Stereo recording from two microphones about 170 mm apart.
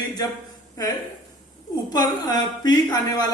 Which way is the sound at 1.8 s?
25° left (ahead or behind).